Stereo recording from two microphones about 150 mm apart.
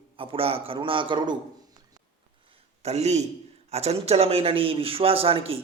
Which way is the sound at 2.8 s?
45° right (ahead or behind).